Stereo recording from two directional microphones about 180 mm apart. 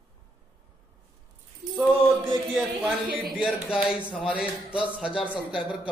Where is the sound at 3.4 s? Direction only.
5° right (ahead or behind).